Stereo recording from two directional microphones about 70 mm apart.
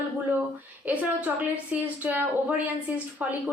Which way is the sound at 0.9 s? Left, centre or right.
Right.